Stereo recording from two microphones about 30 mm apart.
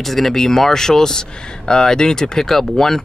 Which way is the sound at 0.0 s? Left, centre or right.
Centre.